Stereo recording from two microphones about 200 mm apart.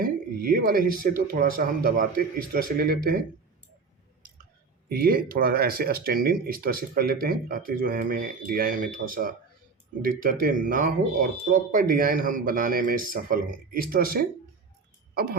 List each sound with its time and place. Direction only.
0.0 s speech: 45° right (ahead or behind)
4.9 s speech: 50° right (ahead or behind)